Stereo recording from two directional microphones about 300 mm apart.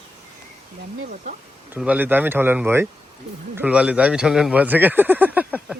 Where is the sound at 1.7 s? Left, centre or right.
Centre.